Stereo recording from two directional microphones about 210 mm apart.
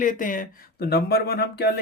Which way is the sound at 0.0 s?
40° left (ahead or behind).